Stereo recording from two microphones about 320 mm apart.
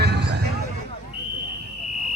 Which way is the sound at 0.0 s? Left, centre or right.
Right.